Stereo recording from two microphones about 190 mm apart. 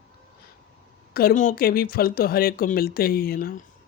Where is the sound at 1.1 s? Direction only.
50° left (ahead or behind).